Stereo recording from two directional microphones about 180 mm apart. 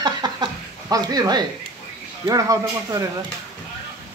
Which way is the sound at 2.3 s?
20° right (ahead or behind).